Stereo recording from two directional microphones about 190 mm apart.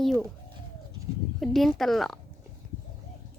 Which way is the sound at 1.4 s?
Centre (ahead or behind).